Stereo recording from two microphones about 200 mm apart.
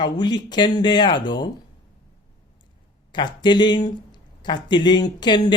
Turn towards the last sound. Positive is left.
turn(degrees=20)  # may be behind; listen again after turning